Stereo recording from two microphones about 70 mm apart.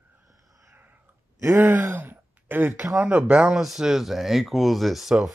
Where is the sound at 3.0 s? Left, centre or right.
Right; by 5.3 s centre.